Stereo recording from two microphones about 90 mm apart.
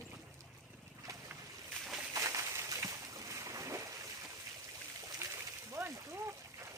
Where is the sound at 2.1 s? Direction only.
35° right (ahead or behind).